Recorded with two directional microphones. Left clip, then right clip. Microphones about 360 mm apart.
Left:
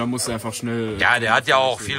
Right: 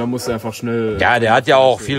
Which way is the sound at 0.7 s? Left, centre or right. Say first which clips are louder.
Right 4 dB; centre.